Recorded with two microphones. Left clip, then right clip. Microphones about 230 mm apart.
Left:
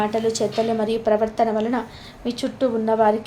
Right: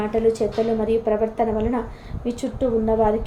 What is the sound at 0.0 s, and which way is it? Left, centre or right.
A woman's voice, centre.